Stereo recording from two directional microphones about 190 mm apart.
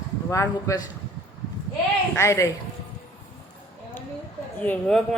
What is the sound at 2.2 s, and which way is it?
Speech, 15° left (ahead or behind).